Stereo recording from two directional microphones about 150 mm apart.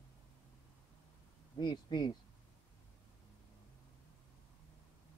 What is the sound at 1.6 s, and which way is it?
Speech, 30° left (ahead or behind).